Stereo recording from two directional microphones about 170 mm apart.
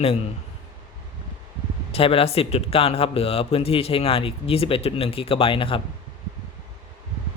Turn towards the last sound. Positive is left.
turn(degrees=30)  # may be behind; listen again after turning